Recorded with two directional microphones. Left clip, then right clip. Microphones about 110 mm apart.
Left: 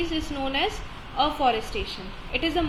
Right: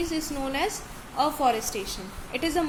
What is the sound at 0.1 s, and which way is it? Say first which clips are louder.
A woman's voice: left 2 dB; 35° right (ahead or behind).